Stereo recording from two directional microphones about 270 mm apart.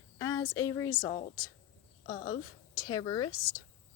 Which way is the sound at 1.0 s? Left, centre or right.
Left.